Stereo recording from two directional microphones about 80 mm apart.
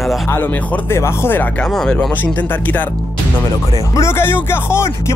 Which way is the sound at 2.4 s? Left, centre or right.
Left.